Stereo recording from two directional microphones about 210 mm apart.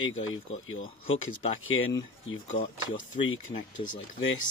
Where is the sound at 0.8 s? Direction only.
25° left (ahead or behind).